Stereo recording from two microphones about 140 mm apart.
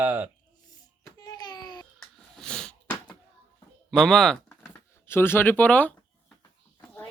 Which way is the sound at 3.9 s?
5° left (ahead or behind).